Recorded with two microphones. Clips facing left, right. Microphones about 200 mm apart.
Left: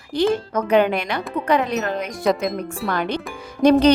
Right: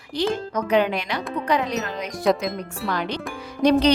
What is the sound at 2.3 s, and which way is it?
Speech, centre (ahead or behind).